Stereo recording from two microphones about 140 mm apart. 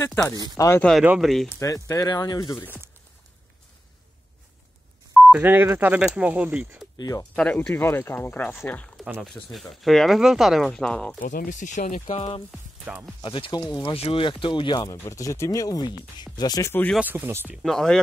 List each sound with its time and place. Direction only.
0.6 s speech: 20° left (ahead or behind)
1.0 s speech: 5° right (ahead or behind)
1.6 s speech: 25° left (ahead or behind)
5.1 s a sound: centre (ahead or behind)
5.4 s speech: 15° right (ahead or behind)
7.0 s speech: 25° left (ahead or behind)
7.3 s speech: 10° left (ahead or behind)
11.1 s speech: 80° left; by 12.3 s 60° left (ahead or behind)
12.9 s speech: 5° right (ahead or behind)
13.2 s speech: 35° left (ahead or behind)
13.8 s speech: 45° left (ahead or behind)
14.9 s speech: 25° left (ahead or behind)
17.0 s speech: 15° right (ahead or behind)
17.6 s speech: 5° left (ahead or behind)